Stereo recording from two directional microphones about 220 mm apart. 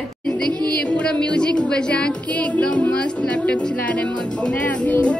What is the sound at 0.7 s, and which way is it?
Music, 5° left (ahead or behind).